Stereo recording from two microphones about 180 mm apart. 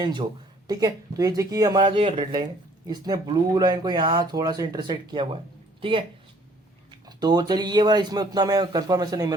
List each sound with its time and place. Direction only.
0.0 s speech: 25° right (ahead or behind)